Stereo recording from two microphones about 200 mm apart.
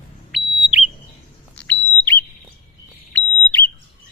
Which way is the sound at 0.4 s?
55° left (ahead or behind).